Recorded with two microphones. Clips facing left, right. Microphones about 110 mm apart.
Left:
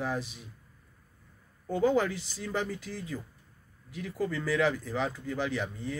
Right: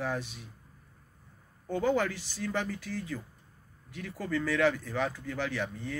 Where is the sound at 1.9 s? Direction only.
15° left (ahead or behind).